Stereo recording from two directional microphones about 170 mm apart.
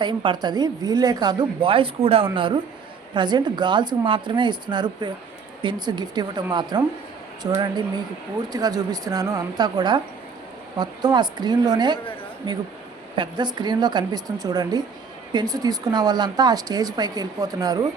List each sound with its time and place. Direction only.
0.0 s a woman's voice: 25° right (ahead or behind)
13.1 s a woman's voice: 25° right (ahead or behind)